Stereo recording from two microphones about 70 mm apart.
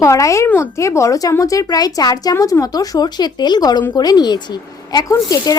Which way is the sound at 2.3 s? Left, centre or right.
Left.